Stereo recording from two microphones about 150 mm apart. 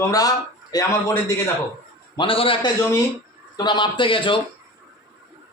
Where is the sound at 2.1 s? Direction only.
35° left (ahead or behind).